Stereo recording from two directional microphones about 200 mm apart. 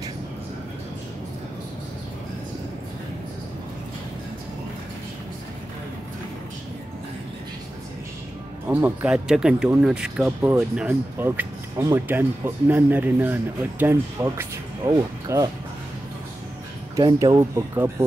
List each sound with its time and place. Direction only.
8.6 s speech: 10° right (ahead or behind)
16.9 s speech: 15° right (ahead or behind)